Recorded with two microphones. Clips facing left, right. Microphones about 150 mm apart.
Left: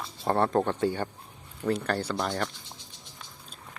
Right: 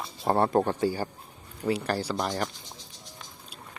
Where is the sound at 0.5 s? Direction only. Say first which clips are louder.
Right 1 dB; 5° right (ahead or behind).